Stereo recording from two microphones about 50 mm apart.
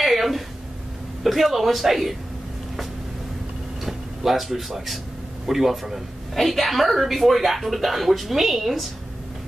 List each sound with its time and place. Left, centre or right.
0.0 s a sound: centre
1.2 s a woman's voice: centre
3.8 s a woman's voice: centre